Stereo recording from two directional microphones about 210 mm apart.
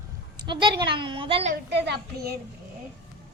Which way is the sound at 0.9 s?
25° right (ahead or behind).